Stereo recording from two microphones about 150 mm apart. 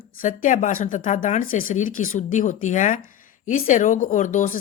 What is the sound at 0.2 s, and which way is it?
Speech, 55° left (ahead or behind).